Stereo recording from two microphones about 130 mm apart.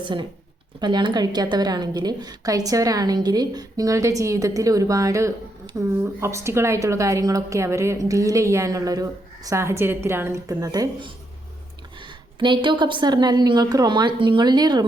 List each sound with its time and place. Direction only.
0.0 s a woman's voice: 40° right (ahead or behind)
12.4 s a woman's voice: 40° right (ahead or behind)